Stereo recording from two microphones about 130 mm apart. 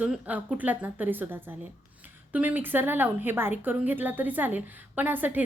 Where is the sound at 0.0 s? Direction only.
10° right (ahead or behind).